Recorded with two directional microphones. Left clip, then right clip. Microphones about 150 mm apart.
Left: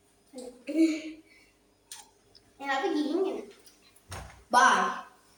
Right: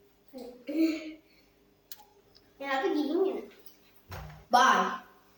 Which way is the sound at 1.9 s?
15° right (ahead or behind).